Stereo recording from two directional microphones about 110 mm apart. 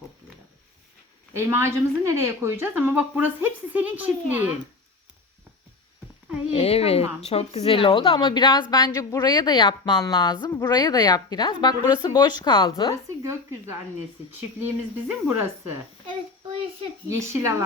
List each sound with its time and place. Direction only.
1.5 s a woman's voice: 25° right (ahead or behind)
6.5 s speech: 65° left (ahead or behind)
8.3 s a woman's voice: 40° left (ahead or behind)
12.7 s a woman's voice: 35° left (ahead or behind)
14.6 s speech: 20° right (ahead or behind)
17.1 s speech: 25° right (ahead or behind)